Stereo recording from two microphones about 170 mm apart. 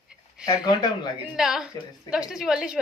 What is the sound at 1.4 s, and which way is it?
A woman's voice, 5° right (ahead or behind).